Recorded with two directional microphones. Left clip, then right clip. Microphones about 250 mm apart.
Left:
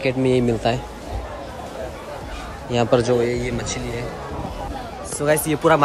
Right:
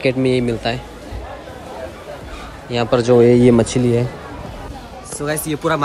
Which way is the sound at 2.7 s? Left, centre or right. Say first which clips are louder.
Right 4 dB; centre.